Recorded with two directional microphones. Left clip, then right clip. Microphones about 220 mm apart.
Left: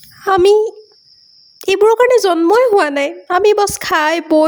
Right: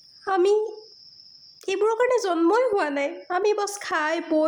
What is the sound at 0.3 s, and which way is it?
Speech, 40° left (ahead or behind).